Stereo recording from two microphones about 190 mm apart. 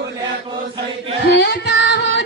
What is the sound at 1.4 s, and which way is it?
Music, 60° left (ahead or behind).